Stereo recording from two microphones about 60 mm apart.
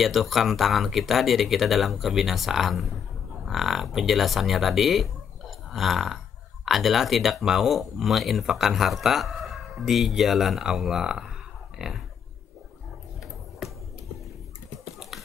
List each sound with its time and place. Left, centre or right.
0.0 s speech: centre
5.7 s burping: centre
6.6 s speech: centre
11.8 s a sound: centre
13.6 s music: centre
15.0 s finger snapping: centre